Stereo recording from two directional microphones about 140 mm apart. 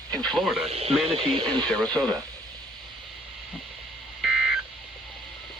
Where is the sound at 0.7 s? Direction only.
45° right (ahead or behind).